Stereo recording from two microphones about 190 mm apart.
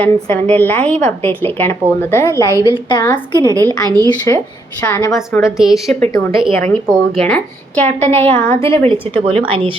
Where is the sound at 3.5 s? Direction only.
20° right (ahead or behind).